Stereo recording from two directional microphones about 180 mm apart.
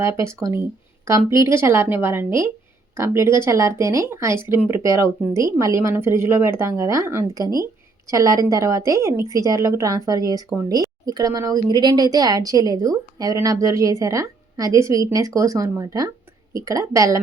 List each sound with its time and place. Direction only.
0.2 s a woman's voice: 15° right (ahead or behind)